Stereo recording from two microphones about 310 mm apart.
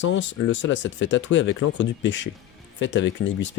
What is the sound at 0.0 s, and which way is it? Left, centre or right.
Speech, left.